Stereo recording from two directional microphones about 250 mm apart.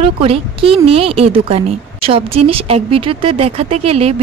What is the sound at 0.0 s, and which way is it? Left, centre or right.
Speech, right.